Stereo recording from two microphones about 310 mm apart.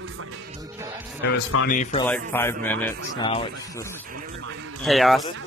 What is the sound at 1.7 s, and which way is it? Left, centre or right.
Speech, left.